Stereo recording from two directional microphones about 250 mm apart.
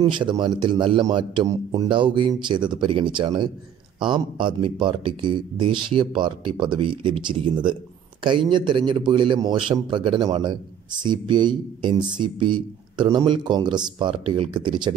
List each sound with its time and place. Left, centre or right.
0.0 s a man's voice: centre